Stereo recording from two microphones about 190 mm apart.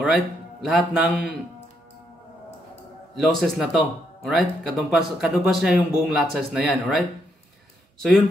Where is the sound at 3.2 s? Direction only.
Centre (ahead or behind).